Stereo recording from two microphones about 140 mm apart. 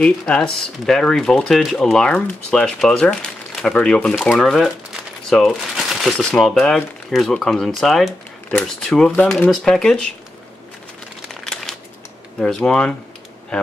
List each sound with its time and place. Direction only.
0.0 s speech: 10° left (ahead or behind)
11.4 s crumpling: 5° left (ahead or behind)
12.4 s speech: 5° left (ahead or behind)